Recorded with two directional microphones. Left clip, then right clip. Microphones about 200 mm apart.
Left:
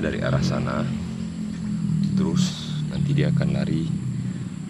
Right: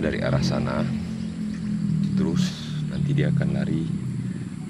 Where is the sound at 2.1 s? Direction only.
Centre (ahead or behind).